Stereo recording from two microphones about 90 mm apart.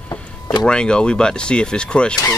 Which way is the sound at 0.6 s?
10° left (ahead or behind).